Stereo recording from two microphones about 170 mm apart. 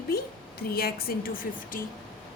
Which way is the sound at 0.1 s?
65° left (ahead or behind).